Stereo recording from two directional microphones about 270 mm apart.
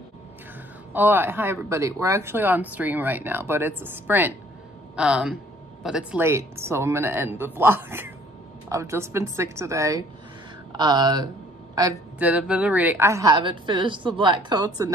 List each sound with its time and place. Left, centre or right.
0.9 s speech: centre